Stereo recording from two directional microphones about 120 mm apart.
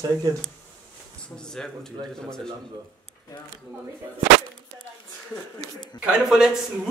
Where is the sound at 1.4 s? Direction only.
5° left (ahead or behind).